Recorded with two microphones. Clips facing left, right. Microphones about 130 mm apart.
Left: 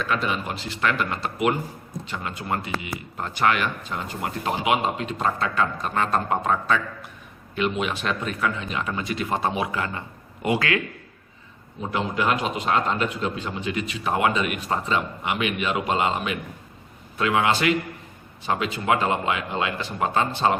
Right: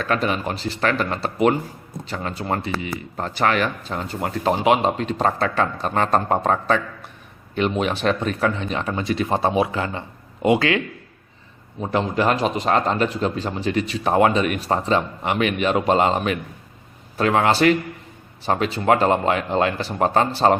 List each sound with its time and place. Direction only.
0.0 s a man's voice: 40° right (ahead or behind); by 10.8 s 25° right (ahead or behind)
11.8 s speech: 40° right (ahead or behind)